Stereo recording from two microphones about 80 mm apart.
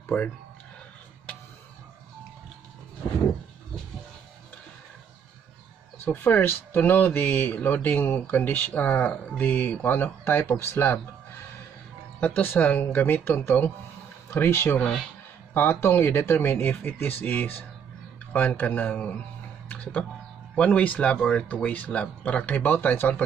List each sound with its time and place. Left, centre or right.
0.1 s speech: centre
6.0 s speech: left
12.2 s speech: left
19.7 s music: centre
20.5 s speech: centre